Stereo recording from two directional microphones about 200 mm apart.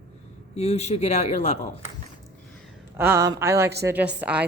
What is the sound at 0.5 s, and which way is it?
Speech, 35° left (ahead or behind).